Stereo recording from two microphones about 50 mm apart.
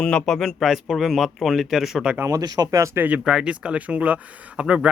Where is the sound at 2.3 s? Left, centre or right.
Right.